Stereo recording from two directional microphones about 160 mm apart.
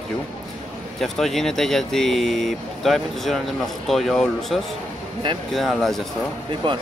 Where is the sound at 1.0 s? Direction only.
Centre (ahead or behind).